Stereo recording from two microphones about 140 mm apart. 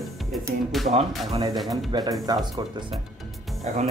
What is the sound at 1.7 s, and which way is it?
Speech, 30° right (ahead or behind).